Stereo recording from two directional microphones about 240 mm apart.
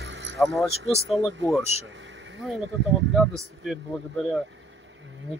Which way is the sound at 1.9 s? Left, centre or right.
Right.